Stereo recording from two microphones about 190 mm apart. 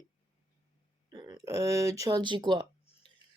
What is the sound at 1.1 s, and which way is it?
Speech, 20° right (ahead or behind).